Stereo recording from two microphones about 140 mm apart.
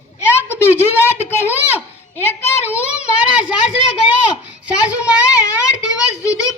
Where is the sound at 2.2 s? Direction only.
15° left (ahead or behind).